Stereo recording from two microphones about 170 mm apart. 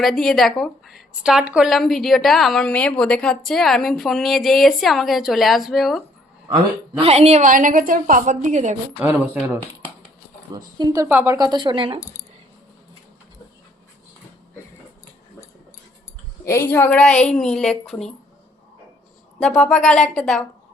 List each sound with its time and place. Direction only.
0.0 s a woman's voice: centre (ahead or behind)
7.0 s a woman's voice: 35° right (ahead or behind)
9.0 s speech: 10° right (ahead or behind)
10.5 s speech: 20° right (ahead or behind)
11.3 s speech: 25° right (ahead or behind)
16.5 s a woman's voice: 15° left (ahead or behind)
19.4 s a woman's voice: 5° left (ahead or behind)